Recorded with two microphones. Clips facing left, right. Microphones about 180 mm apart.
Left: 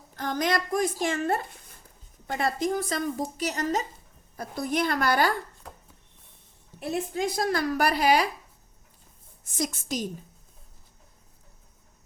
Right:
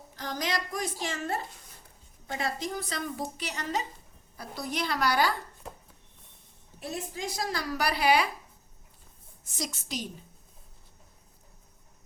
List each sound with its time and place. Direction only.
0.2 s speech: 50° left (ahead or behind)
6.7 s speech: 55° left (ahead or behind)
9.6 s speech: 50° left (ahead or behind)